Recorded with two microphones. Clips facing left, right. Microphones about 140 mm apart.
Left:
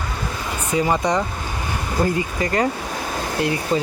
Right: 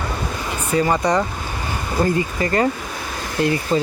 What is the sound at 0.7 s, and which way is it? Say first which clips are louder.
Speech: right 2 dB; 5° left (ahead or behind).